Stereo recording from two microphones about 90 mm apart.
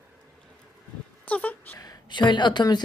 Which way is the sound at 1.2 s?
15° left (ahead or behind).